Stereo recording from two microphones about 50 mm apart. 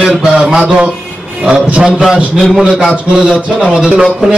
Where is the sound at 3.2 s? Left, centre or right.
Centre.